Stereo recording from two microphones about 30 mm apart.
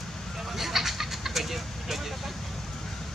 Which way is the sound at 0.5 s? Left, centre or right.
Centre.